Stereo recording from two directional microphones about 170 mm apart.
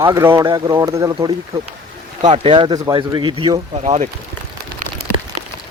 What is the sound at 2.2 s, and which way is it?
Speech, 30° right (ahead or behind).